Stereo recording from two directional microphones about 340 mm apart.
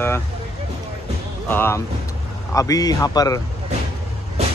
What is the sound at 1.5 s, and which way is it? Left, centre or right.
Speech, centre.